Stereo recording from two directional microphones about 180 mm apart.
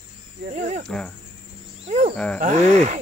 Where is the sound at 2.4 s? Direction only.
40° right (ahead or behind).